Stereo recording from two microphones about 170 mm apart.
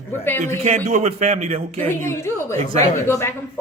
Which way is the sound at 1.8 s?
15° left (ahead or behind).